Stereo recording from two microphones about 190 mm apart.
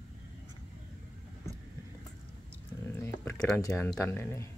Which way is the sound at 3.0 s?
15° left (ahead or behind).